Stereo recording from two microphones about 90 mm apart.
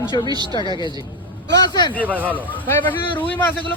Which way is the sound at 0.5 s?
60° left (ahead or behind).